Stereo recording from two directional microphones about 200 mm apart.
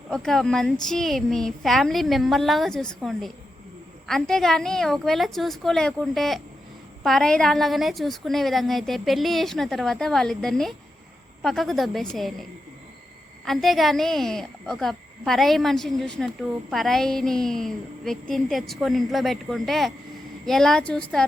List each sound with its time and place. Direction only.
0.1 s speech: centre (ahead or behind)